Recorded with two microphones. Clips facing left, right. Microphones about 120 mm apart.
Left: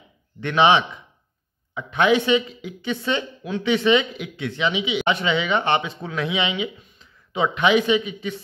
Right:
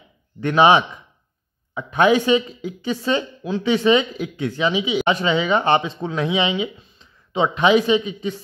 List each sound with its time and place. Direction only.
0.4 s a woman's voice: 40° right (ahead or behind)